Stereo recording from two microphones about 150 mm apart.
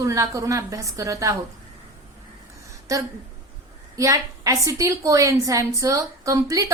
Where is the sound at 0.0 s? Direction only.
20° right (ahead or behind).